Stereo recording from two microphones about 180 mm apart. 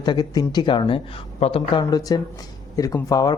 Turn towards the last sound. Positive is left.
turn(degrees=20)  # may be behind; listen again after turning